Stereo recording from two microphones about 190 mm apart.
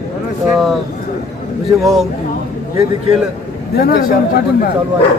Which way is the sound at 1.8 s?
Centre (ahead or behind).